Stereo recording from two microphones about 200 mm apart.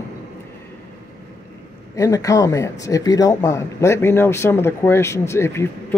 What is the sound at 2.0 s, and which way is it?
Speech, 15° left (ahead or behind).